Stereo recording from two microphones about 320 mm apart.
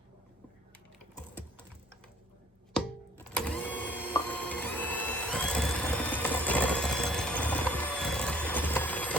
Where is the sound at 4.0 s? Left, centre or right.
Centre.